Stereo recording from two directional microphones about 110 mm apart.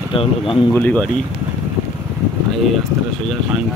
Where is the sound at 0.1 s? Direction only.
55° left (ahead or behind).